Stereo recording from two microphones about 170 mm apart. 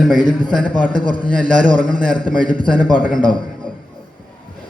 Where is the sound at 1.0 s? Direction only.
30° left (ahead or behind).